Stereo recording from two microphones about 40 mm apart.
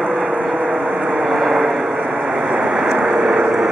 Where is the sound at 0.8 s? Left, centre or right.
Centre.